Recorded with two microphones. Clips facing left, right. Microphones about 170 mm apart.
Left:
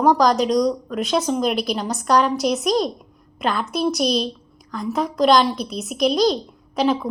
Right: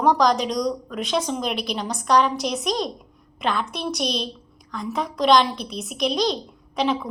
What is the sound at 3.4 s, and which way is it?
Speech, 40° left (ahead or behind).